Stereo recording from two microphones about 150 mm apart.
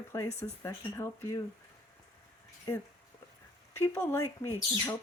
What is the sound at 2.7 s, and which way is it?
A woman's voice, 25° left (ahead or behind).